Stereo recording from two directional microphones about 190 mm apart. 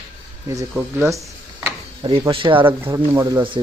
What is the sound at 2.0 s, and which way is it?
Speech, 30° right (ahead or behind).